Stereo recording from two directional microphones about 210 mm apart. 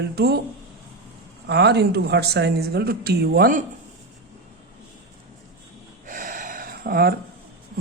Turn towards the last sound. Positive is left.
turn(degrees=-45)  # may be behind; listen again after turning